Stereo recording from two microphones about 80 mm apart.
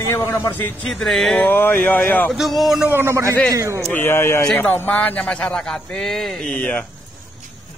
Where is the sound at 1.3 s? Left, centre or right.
Left.